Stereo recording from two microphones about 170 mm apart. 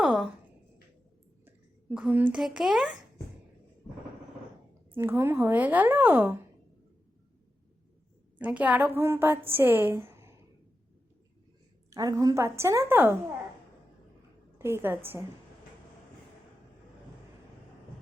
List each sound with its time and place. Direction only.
0.0 s a sound: centre (ahead or behind)
1.5 s a child's voice: 10° right (ahead or behind)
4.9 s a woman's voice: 15° right (ahead or behind)
8.4 s a woman's voice: 10° right (ahead or behind)
11.9 s a woman's voice: 20° right (ahead or behind)
14.6 s a woman's voice: 15° right (ahead or behind)